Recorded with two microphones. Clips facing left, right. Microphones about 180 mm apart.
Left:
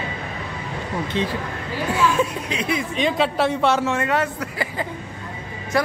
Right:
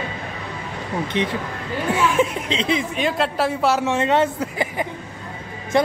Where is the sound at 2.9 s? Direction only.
5° right (ahead or behind).